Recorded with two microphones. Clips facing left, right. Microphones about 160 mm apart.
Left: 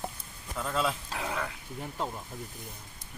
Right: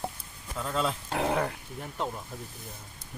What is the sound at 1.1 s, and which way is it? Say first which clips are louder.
Speech: right 7 dB; 55° right (ahead or behind).